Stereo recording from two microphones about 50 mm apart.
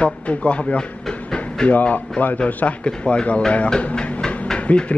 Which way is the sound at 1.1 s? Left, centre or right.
Left.